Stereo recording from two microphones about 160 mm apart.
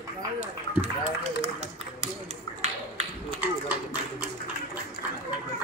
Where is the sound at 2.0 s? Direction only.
45° right (ahead or behind).